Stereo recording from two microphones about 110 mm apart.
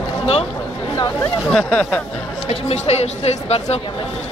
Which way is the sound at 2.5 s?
70° left (ahead or behind).